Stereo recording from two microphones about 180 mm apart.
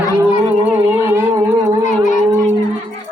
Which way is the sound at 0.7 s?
10° right (ahead or behind).